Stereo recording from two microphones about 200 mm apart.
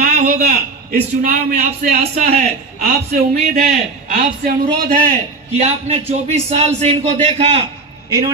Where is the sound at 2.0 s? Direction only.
35° right (ahead or behind).